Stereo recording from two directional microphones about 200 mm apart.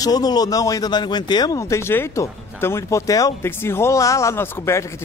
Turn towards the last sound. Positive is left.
turn(degrees=15)  # may be behind; listen again after turning